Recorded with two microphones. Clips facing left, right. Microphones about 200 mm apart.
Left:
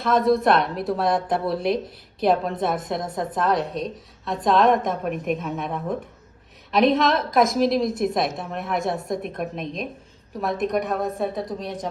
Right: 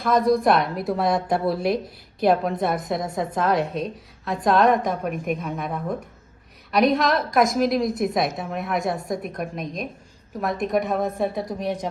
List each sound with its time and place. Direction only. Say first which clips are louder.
0.0 s a woman's voice: even; centre (ahead or behind)
1.5 s speech: even; 20° left (ahead or behind)
2.2 s a woman's voice: right 1 dB; centre (ahead or behind)